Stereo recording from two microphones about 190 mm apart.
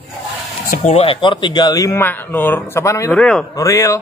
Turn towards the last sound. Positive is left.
turn(degrees=15)  # may be behind; listen again after turning